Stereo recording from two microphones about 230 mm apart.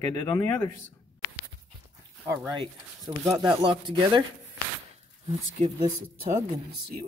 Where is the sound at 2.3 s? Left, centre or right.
Centre.